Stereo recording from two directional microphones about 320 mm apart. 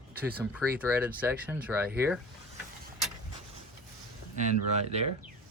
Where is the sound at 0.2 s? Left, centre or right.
Centre.